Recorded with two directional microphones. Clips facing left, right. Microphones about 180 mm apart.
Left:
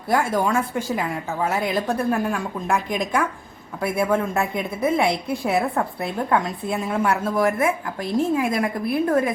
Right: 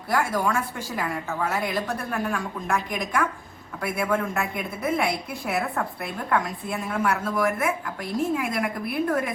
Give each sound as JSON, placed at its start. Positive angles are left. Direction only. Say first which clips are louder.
{"t": 0.1, "sound": "a woman's voice", "louder": "left 4 dB", "side_deg": 25}